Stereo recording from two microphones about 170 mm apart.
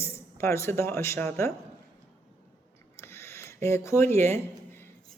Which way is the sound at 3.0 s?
15° left (ahead or behind).